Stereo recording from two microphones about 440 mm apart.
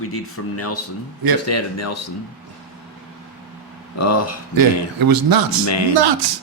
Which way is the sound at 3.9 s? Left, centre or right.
Left.